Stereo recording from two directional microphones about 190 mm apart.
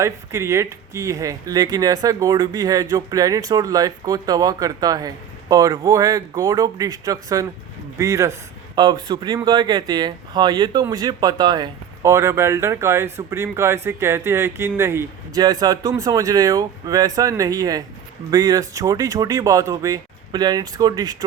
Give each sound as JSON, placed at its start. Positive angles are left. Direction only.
{"t": 0.0, "sound": "a man's voice", "side_deg": -15}